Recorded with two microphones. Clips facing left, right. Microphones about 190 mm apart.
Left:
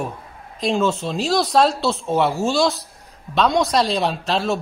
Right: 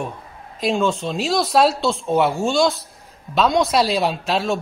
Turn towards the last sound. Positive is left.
turn(degrees=0)  # may be behind; listen again after turning